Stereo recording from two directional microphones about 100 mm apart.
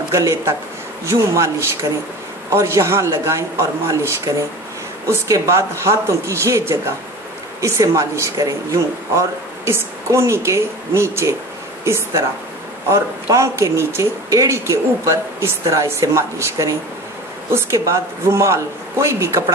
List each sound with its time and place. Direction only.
0.1 s a man's voice: 30° right (ahead or behind)